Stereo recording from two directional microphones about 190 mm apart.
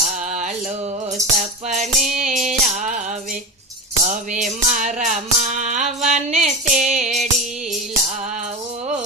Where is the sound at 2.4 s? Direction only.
40° right (ahead or behind).